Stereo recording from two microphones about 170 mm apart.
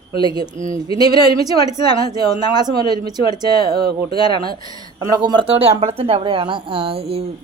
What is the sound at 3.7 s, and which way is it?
Speech, 65° right (ahead or behind).